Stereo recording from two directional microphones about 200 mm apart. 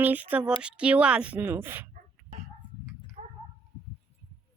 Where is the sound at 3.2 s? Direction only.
35° right (ahead or behind).